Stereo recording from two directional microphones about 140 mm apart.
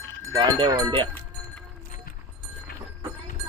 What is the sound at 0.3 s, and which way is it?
Speech, 25° right (ahead or behind).